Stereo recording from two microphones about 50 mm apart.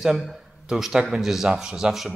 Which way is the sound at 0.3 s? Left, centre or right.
Centre.